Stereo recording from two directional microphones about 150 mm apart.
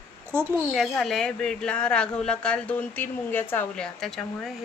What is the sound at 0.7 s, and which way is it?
Speech, centre (ahead or behind).